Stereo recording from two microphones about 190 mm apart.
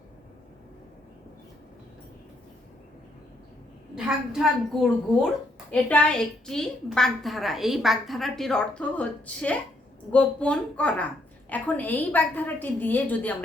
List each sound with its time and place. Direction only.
3.9 s a woman's voice: 5° right (ahead or behind)